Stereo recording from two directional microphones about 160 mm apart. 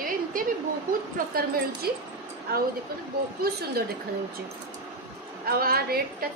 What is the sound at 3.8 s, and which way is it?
Speech, 80° right.